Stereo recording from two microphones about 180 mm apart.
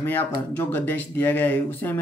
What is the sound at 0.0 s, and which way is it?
Speech, 10° left (ahead or behind).